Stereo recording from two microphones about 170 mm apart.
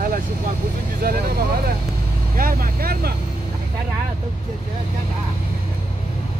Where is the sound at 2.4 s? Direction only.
55° right (ahead or behind).